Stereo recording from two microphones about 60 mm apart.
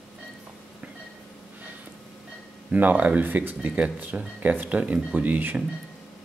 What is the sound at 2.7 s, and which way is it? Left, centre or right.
Speech, right.